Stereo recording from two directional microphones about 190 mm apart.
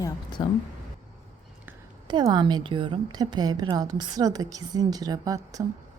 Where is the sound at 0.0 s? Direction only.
25° left (ahead or behind).